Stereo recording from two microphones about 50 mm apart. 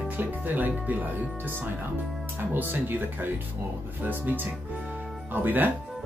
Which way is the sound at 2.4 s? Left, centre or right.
Right.